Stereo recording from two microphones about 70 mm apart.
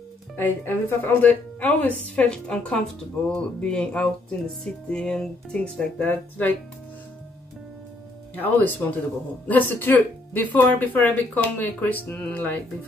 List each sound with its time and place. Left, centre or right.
0.4 s speech: left
6.0 s speech: left
8.4 s speech: left